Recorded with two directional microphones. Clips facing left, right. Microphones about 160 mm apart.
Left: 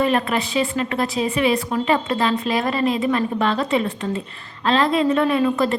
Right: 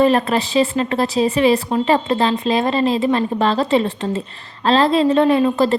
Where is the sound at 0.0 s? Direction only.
35° right (ahead or behind).